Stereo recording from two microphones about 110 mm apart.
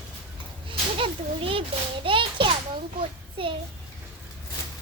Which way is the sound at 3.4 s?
50° right (ahead or behind).